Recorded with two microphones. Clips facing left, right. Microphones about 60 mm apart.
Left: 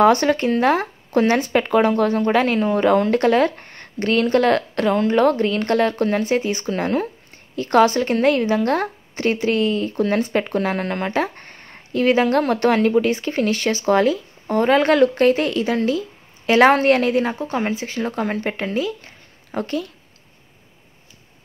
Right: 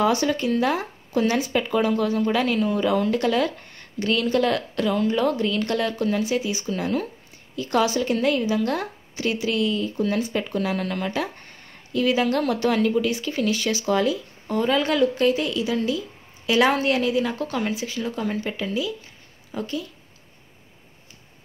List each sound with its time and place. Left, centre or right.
0.0 s a woman's voice: left
17.5 s a woman's voice: left